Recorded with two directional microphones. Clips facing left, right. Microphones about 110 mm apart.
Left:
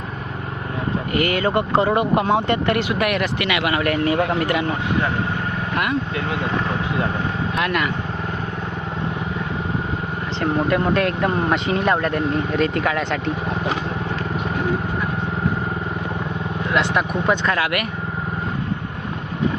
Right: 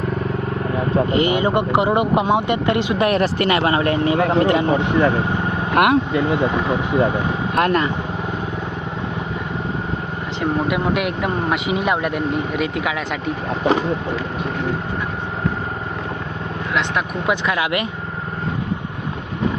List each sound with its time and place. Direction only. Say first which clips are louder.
1.1 s speech: left 1 dB; 20° right (ahead or behind)
5.7 s speech: right 8 dB; 60° right (ahead or behind)
7.6 s speech: right 5 dB; 35° right (ahead or behind)
10.4 s speech: left 1 dB; 5° right (ahead or behind)
16.7 s speech: left 2 dB; 5° right (ahead or behind)